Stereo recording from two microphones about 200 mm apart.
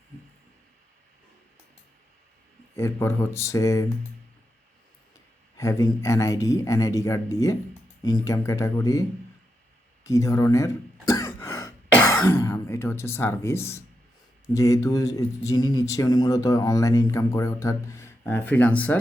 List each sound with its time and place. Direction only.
2.7 s speech: 15° left (ahead or behind)
5.5 s speech: 15° left (ahead or behind)
10.0 s throat clearing: 15° left (ahead or behind)
14.5 s speech: 15° left (ahead or behind)